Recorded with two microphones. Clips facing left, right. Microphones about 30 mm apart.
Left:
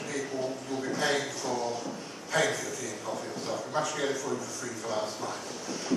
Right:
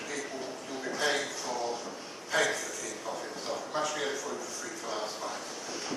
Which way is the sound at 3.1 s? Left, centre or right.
Right.